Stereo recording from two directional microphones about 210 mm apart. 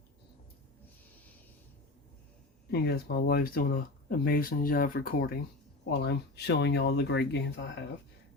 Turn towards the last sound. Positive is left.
turn(degrees=55)  # may be behind; listen again after turning